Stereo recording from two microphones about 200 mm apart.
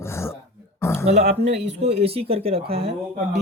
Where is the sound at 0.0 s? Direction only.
15° left (ahead or behind).